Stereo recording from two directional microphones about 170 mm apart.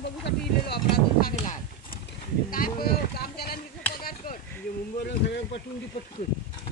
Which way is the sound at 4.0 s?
60° left (ahead or behind).